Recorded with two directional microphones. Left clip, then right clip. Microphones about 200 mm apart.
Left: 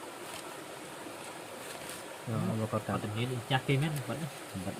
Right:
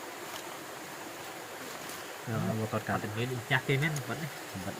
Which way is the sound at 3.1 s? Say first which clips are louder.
Right 1 dB; 50° left (ahead or behind).